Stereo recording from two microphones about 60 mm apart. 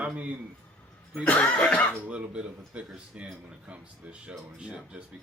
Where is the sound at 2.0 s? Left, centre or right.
Right.